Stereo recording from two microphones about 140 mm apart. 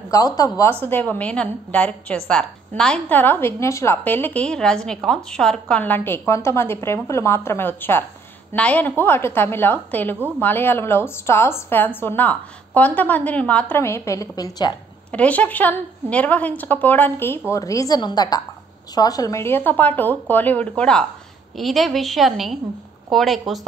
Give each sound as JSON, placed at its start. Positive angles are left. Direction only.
{"t": 0.1, "sound": "a woman's voice", "side_deg": 25}
{"t": 0.6, "sound": "a woman's voice", "side_deg": 15}
{"t": 15.0, "sound": "a woman's voice", "side_deg": 10}